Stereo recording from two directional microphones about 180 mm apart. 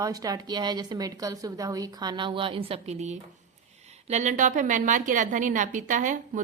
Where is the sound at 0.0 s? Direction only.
20° right (ahead or behind).